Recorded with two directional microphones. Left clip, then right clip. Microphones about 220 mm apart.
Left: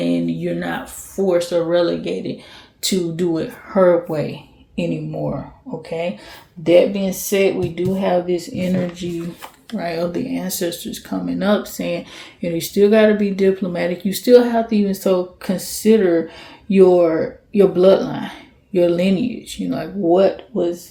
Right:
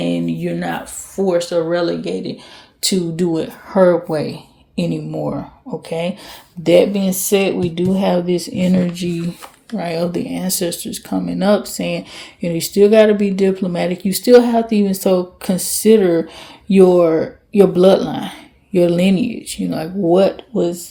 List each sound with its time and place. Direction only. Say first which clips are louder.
0.0 s speech: even; 30° right (ahead or behind)
6.6 s speech: right 1 dB; 45° right (ahead or behind)